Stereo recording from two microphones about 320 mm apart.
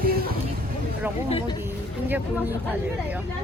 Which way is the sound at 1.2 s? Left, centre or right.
Centre.